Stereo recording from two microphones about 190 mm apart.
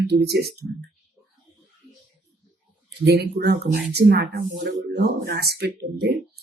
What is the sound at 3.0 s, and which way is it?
Speech, 60° right (ahead or behind).